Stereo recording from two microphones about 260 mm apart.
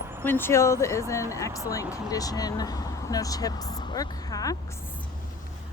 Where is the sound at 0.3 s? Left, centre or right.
Centre.